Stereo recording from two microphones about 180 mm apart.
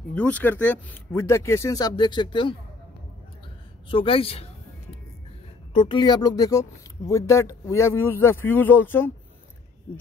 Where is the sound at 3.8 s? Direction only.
30° left (ahead or behind).